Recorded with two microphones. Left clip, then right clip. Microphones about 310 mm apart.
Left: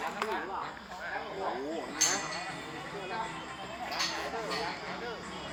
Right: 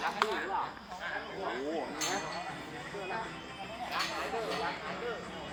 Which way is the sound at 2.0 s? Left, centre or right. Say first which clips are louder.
Left 3 dB; centre.